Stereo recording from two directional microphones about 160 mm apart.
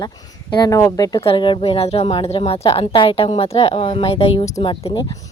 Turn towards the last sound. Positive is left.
turn(degrees=30)  # may be behind; listen again after turning